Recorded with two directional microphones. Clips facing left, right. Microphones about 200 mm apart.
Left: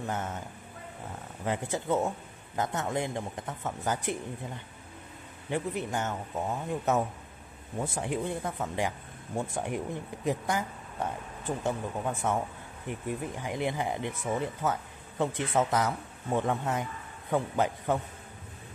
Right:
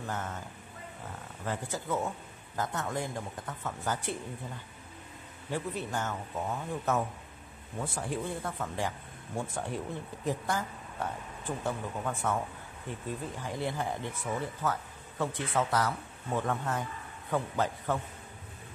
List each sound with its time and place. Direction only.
0.0 s speech: 20° left (ahead or behind)
1.4 s speech: 20° left (ahead or behind)
5.5 s speech: 15° left (ahead or behind)
7.8 s speech: 20° left (ahead or behind)